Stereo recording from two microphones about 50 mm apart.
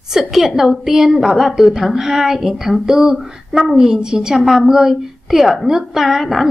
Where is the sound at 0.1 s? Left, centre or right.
Centre.